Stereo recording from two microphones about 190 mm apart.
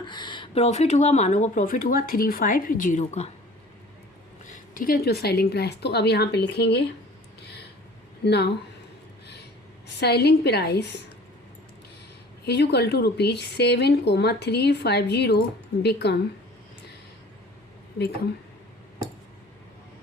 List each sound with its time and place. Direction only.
0.0 s speech: 25° left (ahead or behind)
4.5 s speech: 45° left (ahead or behind)
7.4 s a sound: 60° left (ahead or behind)
8.2 s speech: 60° left (ahead or behind)
9.2 s a sound: 60° left (ahead or behind)
10.0 s speech: 60° left (ahead or behind)
12.5 s speech: 60° left (ahead or behind)